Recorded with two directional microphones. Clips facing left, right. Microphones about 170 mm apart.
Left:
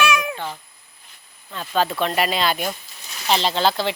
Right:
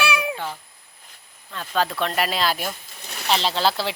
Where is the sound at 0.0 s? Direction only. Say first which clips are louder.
Left 3 dB; 30° right (ahead or behind).